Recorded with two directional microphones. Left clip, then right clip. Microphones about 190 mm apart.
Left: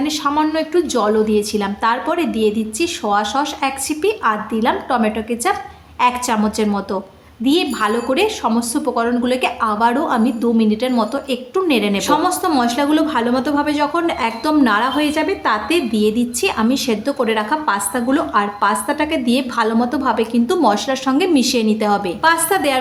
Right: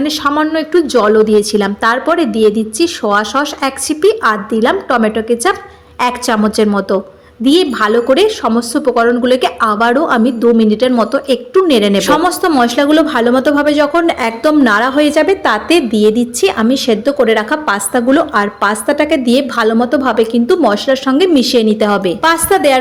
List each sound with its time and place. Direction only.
0.0 s a woman's voice: 25° right (ahead or behind)